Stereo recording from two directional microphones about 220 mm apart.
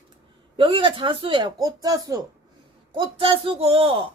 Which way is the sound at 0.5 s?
25° right (ahead or behind).